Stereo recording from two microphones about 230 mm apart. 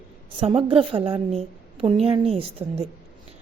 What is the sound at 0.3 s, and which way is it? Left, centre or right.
A woman's voice, right.